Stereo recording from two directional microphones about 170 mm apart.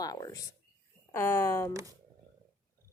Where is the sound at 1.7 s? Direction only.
20° right (ahead or behind).